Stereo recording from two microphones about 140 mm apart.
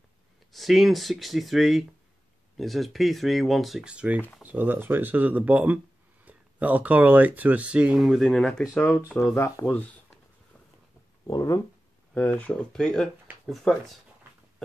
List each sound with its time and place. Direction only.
0.5 s speech: centre (ahead or behind)
11.2 s speech: 25° left (ahead or behind)
12.1 s speech: 10° left (ahead or behind)